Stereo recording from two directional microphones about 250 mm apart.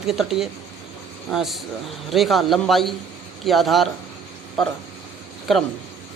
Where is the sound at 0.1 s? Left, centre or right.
Centre.